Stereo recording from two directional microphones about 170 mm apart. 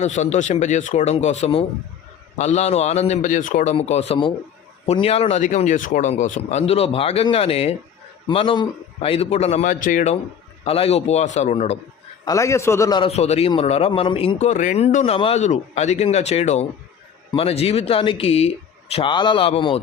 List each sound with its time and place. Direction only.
0.0 s speech: 40° left (ahead or behind)
10.7 s speech: 35° left (ahead or behind)
12.2 s a man's voice: 20° left (ahead or behind)
13.0 s speech: 40° left (ahead or behind)